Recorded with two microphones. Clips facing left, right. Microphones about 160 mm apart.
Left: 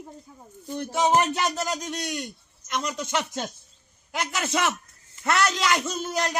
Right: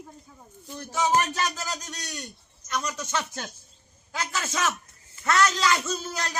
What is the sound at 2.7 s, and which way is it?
Speech, 20° left (ahead or behind).